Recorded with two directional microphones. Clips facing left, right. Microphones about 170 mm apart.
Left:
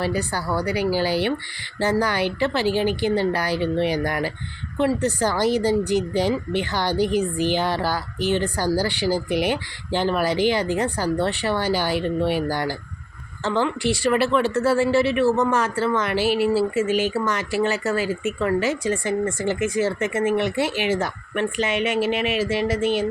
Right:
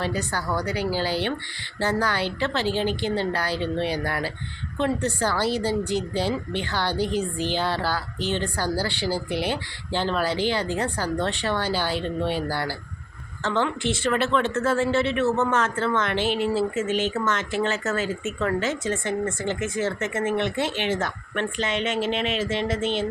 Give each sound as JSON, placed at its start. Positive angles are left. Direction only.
{"t": 0.0, "sound": "speech", "side_deg": 10}